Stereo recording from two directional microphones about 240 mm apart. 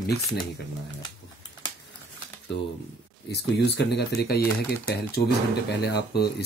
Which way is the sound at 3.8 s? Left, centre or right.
Left.